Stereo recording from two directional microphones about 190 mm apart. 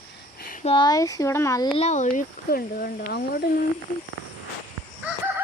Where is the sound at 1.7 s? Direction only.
35° left (ahead or behind); by 3.5 s 50° left (ahead or behind).